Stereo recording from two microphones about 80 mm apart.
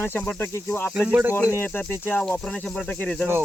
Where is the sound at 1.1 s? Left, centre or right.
Centre.